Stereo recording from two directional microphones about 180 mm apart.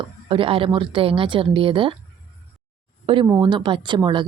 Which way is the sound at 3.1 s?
30° right (ahead or behind).